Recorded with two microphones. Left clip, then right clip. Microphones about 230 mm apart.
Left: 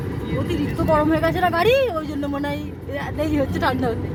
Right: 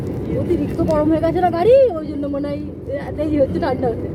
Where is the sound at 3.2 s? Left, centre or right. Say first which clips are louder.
Right 4 dB; left.